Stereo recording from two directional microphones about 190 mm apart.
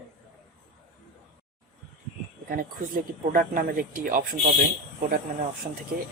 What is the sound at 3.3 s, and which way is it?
Speech, 50° right (ahead or behind).